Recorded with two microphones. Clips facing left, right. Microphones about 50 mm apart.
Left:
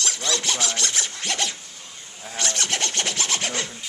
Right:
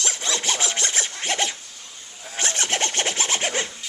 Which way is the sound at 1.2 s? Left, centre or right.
Right.